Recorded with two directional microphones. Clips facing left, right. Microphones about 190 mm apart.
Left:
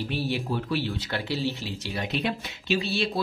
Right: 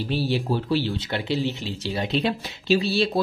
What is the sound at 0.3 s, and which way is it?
Speech, 30° right (ahead or behind).